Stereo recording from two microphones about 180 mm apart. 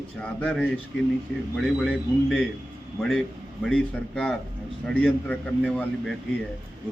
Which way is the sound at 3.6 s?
5° left (ahead or behind).